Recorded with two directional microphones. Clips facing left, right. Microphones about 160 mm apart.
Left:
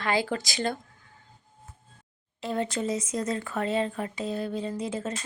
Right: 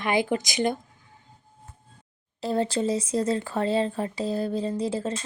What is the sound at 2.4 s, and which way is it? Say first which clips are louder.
Speech: right 4 dB; 35° right (ahead or behind).